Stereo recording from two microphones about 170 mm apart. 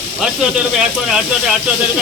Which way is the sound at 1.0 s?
5° right (ahead or behind).